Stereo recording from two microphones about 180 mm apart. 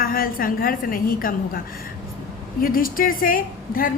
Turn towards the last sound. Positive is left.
turn(degrees=50)  # may be behind; listen again after turning